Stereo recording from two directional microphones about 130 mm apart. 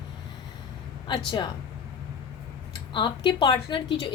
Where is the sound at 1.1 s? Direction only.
40° left (ahead or behind).